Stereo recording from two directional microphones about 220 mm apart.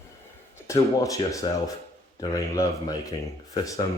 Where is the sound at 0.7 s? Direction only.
15° left (ahead or behind).